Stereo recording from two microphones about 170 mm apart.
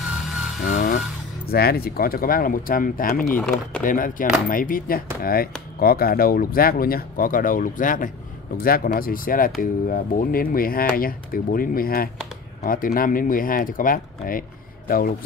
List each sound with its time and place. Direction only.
0.0 s a sound: 5° right (ahead or behind)
0.7 s vehicle: 55° left (ahead or behind)
1.5 s speech: 65° left (ahead or behind)
3.3 s speech: 5° left (ahead or behind)
3.8 s speech: 55° left (ahead or behind)